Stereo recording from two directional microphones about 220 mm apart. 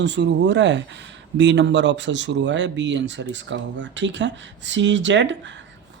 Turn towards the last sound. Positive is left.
turn(degrees=-55)  # may be behind; listen again after turning